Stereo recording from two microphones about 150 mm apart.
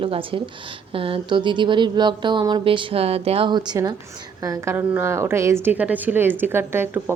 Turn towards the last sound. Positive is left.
turn(degrees=-15)  # may be behind; listen again after turning